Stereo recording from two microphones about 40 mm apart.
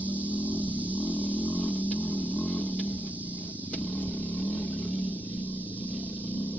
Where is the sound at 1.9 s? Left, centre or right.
Left.